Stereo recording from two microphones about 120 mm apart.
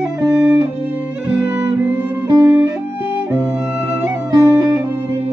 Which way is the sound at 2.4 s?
15° right (ahead or behind).